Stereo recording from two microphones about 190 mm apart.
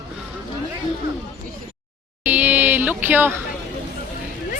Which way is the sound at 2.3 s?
10° right (ahead or behind).